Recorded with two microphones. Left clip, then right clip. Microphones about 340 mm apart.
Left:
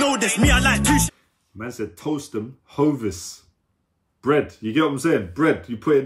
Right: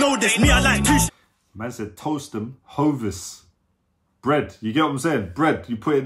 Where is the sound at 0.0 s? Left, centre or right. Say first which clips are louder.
Right 1 dB; centre.